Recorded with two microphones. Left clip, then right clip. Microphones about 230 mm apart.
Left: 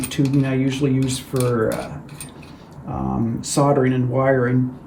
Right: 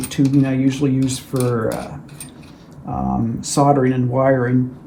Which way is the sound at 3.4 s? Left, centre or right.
Right.